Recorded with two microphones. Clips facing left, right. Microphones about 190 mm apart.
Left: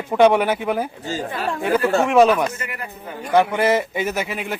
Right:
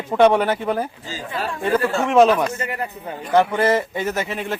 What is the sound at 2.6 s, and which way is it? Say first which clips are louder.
Speech: right 5 dB; 35° right (ahead or behind).